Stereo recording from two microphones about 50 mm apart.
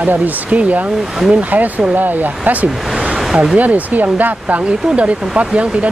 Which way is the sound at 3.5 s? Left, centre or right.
Right.